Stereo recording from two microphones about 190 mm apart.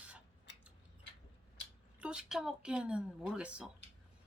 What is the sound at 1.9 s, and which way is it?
A woman's voice, 5° right (ahead or behind).